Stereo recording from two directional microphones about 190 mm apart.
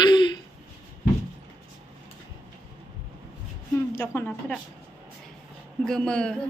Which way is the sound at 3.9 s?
10° left (ahead or behind).